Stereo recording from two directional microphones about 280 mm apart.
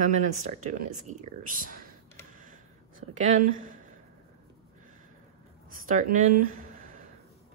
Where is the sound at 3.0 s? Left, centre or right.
Right.